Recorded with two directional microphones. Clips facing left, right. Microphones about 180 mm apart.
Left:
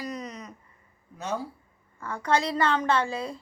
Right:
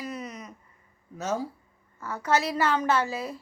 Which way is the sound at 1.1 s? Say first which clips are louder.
Right 2 dB; 40° right (ahead or behind).